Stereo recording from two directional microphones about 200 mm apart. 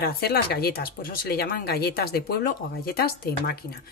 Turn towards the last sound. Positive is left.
turn(degrees=50)  # may be behind; listen again after turning